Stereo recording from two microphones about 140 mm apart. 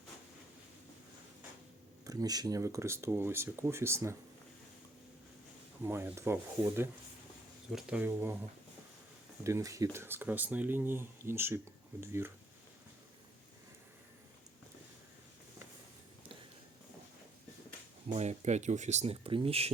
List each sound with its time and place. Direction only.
2.0 s speech: 25° right (ahead or behind)
5.8 s speech: 15° right (ahead or behind)
7.7 s speech: 5° right (ahead or behind)
18.1 s speech: 55° right (ahead or behind)